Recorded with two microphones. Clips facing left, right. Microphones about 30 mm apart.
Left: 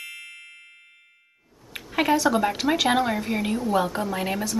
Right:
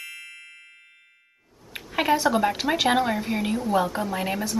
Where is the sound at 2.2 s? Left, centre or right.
Centre.